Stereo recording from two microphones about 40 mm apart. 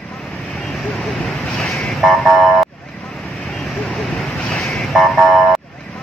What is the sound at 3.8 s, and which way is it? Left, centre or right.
Vehicle, centre.